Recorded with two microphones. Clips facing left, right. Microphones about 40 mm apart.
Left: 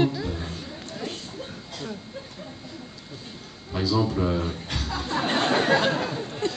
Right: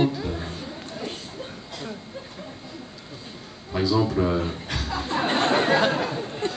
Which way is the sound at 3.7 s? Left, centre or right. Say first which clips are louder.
Right 2 dB; centre.